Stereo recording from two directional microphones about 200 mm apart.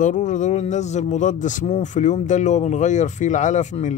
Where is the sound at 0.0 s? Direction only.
40° left (ahead or behind).